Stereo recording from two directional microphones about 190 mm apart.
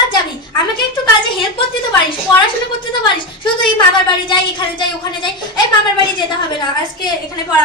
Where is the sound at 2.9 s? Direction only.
25° left (ahead or behind).